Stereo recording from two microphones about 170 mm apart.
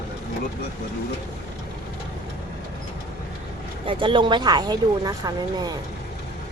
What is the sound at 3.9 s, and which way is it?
Speech, 30° right (ahead or behind).